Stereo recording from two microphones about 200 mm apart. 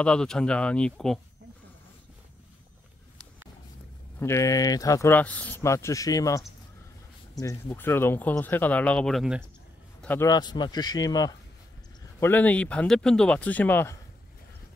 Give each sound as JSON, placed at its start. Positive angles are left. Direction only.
{"t": 0.0, "sound": "speech", "side_deg": 5}
{"t": 4.2, "sound": "speech", "side_deg": 15}
{"t": 10.0, "sound": "speech", "side_deg": 15}